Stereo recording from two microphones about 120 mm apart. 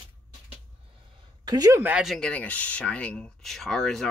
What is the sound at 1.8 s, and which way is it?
Speech, 10° right (ahead or behind).